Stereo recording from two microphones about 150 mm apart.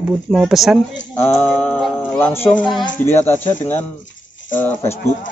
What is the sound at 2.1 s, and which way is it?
Speech, 15° left (ahead or behind).